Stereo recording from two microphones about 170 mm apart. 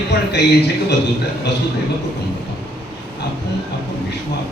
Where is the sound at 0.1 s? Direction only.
80° left.